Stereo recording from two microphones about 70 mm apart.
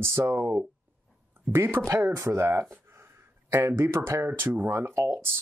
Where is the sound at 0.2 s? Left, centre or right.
Right.